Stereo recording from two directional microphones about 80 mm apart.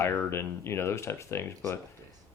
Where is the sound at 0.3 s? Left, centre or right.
Left.